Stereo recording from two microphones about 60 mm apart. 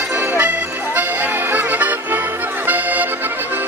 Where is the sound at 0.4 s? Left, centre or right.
Right.